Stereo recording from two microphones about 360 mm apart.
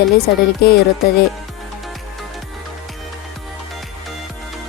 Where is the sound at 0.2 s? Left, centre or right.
Left.